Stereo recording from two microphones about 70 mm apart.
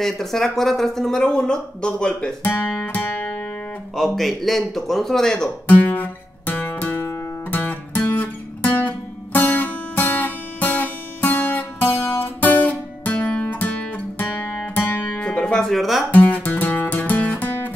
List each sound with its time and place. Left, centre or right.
0.0 s speech: centre
2.4 s music: left
3.9 s speech: centre
5.7 s music: left
15.1 s music: centre
16.1 s music: left